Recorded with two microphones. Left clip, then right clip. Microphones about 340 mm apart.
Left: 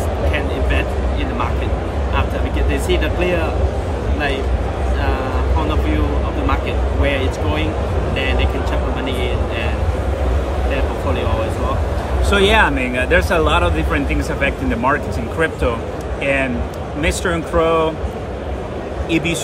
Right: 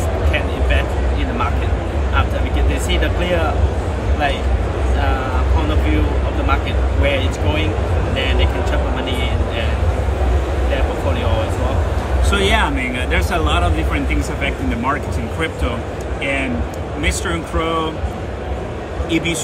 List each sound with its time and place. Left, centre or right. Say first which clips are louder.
12.3 s speech: left 4 dB; centre
17.0 s speech: left 3 dB; centre
19.0 s a man's voice: even; centre